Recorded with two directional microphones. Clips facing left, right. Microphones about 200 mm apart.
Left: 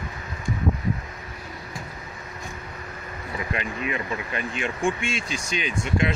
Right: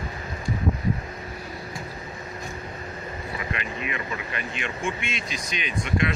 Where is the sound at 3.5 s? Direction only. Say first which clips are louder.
Left 5 dB; 35° left (ahead or behind).